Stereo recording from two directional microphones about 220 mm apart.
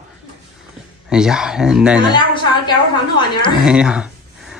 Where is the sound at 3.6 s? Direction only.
5° right (ahead or behind).